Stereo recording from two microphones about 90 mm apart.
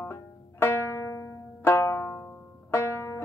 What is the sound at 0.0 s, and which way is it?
Banjo, 25° left (ahead or behind).